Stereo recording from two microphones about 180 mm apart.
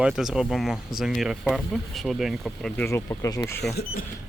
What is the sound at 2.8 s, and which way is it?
Speech, 15° left (ahead or behind).